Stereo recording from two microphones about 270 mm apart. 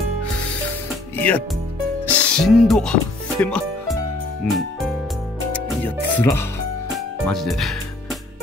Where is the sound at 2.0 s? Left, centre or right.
Centre.